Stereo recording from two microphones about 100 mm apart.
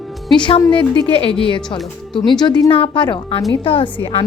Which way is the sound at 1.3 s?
60° left (ahead or behind).